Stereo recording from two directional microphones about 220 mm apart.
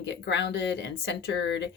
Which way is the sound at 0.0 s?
50° left (ahead or behind).